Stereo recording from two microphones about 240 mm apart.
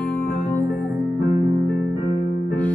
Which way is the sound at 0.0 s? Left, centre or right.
Centre.